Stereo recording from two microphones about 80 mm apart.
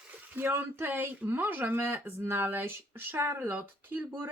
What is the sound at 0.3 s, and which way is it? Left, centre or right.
Speech, right.